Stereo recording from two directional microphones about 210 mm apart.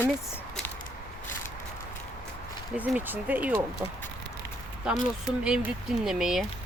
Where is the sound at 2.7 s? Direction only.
5° right (ahead or behind).